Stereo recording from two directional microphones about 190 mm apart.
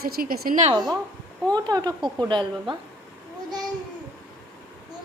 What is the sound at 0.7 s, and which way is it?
Speech, 20° right (ahead or behind).